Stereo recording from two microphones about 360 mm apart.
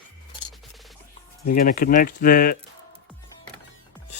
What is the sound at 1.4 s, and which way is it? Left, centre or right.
Speech, left.